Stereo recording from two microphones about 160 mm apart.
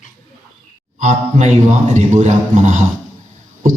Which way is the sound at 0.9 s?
45° right (ahead or behind).